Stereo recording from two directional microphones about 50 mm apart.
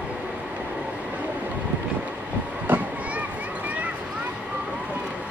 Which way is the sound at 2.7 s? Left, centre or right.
Right.